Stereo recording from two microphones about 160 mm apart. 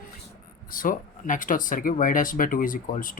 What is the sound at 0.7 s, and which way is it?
Speech, 60° left (ahead or behind).